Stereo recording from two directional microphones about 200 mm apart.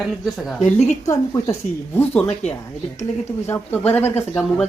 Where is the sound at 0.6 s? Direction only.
35° left (ahead or behind).